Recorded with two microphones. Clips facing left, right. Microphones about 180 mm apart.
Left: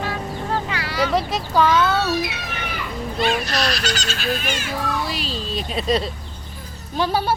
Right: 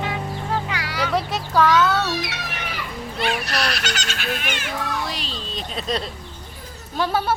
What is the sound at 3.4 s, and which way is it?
Speech, 65° right (ahead or behind).